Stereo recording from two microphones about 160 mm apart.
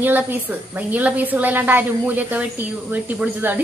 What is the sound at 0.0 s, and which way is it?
A woman's voice, 10° right (ahead or behind).